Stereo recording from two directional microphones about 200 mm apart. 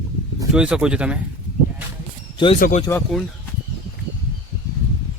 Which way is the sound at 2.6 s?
45° left (ahead or behind).